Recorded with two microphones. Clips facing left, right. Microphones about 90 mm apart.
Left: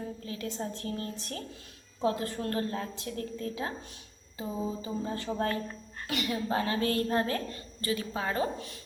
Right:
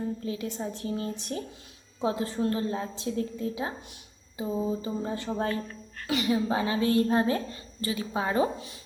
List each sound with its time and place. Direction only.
0.3 s a woman's voice: 15° right (ahead or behind)
4.4 s a sound: 5° right (ahead or behind)
5.0 s a woman's voice: 20° right (ahead or behind)